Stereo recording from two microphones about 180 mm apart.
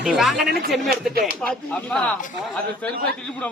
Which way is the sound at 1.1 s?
55° right (ahead or behind).